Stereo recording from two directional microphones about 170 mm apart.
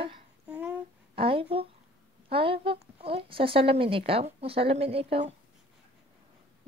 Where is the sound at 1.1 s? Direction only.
30° right (ahead or behind).